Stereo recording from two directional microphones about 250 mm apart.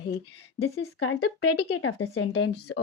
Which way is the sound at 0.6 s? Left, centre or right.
Left.